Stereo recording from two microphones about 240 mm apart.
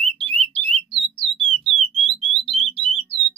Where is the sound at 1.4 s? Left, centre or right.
Centre.